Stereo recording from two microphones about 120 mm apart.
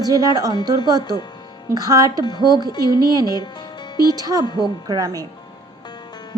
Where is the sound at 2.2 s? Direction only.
35° left (ahead or behind).